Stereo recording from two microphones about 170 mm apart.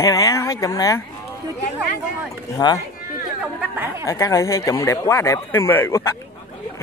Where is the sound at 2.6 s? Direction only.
25° left (ahead or behind).